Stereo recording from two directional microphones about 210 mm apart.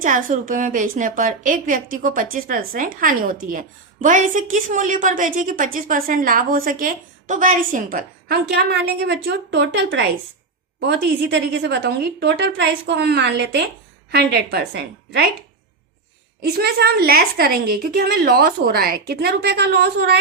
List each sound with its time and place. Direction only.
0.0 s a woman's voice: 40° right (ahead or behind)
16.4 s a woman's voice: 50° right (ahead or behind)